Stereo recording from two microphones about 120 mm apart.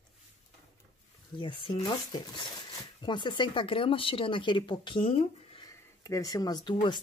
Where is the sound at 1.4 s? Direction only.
45° left (ahead or behind).